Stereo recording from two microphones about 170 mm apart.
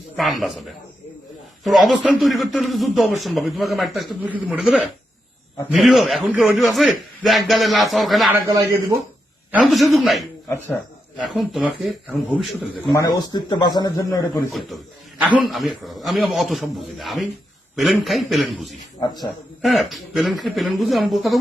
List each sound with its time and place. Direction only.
0.2 s a man's voice: centre (ahead or behind)
8.3 s a man's voice: 20° right (ahead or behind)
9.5 s a man's voice: centre (ahead or behind)
12.9 s speech: 20° left (ahead or behind)
15.2 s a man's voice: 5° right (ahead or behind)
18.9 s speech: 25° left (ahead or behind)
19.6 s a man's voice: centre (ahead or behind)